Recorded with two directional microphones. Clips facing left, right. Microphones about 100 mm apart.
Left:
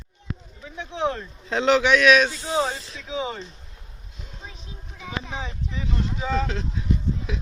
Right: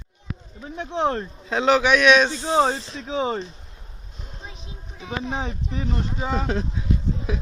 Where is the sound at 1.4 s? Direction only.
15° right (ahead or behind).